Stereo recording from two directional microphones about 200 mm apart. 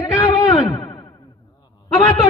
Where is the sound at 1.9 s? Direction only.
20° left (ahead or behind).